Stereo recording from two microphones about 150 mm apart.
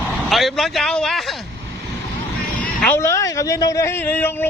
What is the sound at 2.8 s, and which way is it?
Speech, 15° left (ahead or behind).